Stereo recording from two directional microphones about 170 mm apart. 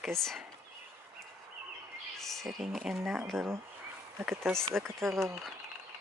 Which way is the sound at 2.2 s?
Centre (ahead or behind).